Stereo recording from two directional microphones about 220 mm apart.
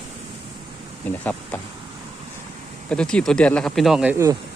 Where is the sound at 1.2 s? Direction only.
5° left (ahead or behind).